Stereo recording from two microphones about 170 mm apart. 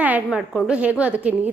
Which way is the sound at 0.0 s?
5° right (ahead or behind).